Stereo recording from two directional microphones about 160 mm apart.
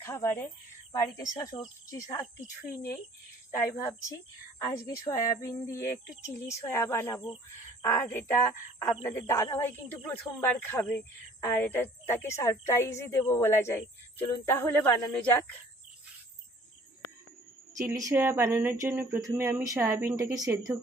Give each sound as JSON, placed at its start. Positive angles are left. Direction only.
{"t": 0.0, "sound": "a woman's voice", "side_deg": 15}
{"t": 4.6, "sound": "a woman's voice", "side_deg": 20}
{"t": 17.7, "sound": "speech", "side_deg": -20}